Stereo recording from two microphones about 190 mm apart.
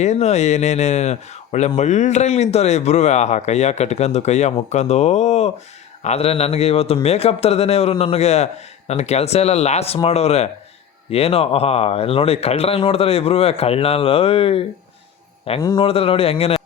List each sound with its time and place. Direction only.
0.0 s speech: 35° left (ahead or behind)
15.6 s speech: 25° left (ahead or behind)